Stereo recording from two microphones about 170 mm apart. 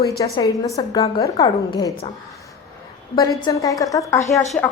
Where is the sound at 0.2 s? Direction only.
20° left (ahead or behind).